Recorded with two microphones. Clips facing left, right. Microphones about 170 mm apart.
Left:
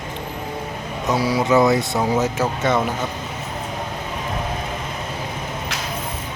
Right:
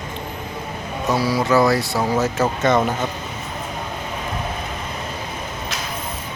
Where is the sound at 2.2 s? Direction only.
10° left (ahead or behind).